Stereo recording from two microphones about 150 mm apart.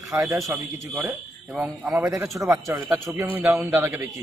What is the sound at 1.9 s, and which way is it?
A man's voice, 20° right (ahead or behind).